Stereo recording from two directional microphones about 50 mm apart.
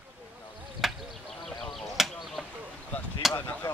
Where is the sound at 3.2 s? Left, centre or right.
Centre.